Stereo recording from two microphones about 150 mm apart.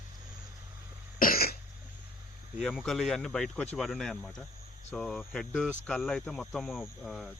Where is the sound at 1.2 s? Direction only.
80° left.